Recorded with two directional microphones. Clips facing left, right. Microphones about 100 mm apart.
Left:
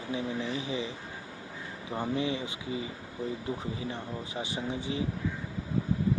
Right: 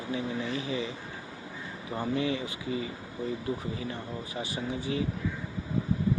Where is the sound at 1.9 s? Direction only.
20° left (ahead or behind).